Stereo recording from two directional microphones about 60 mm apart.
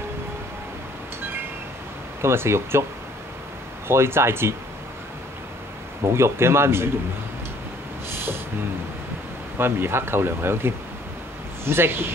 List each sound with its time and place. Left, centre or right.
2.2 s speech: right
3.8 s speech: right
6.0 s speech: right
8.1 s a sound: right
9.6 s speech: right